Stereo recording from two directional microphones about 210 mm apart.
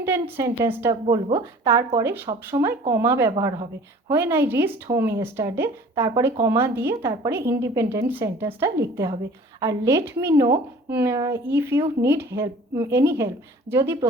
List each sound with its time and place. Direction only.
0.0 s speech: 10° right (ahead or behind)
1.0 s speech: 25° right (ahead or behind)
1.6 s speech: 15° right (ahead or behind)